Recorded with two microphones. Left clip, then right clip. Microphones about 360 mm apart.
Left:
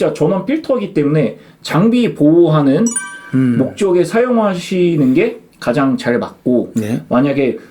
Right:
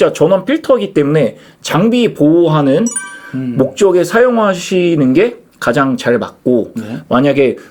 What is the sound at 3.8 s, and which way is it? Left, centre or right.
Speech, right.